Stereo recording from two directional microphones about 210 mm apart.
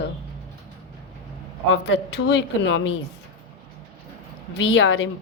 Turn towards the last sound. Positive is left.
turn(degrees=65)  # may be behind; listen again after turning